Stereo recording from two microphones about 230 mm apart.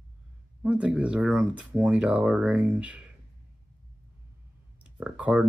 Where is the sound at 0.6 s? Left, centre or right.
Centre.